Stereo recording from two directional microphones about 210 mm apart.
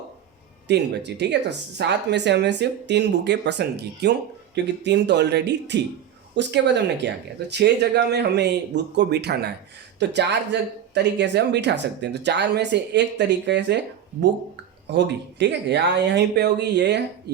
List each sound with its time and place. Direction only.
0.7 s speech: 55° right (ahead or behind)